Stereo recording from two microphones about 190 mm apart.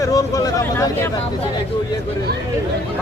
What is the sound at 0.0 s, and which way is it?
Speech, 20° left (ahead or behind).